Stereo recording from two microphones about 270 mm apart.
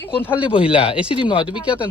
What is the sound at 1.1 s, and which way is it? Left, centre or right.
Speech, centre.